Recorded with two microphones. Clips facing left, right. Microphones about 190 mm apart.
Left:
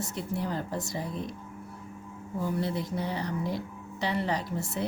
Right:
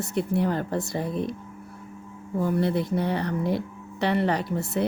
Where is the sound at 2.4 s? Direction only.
60° right (ahead or behind).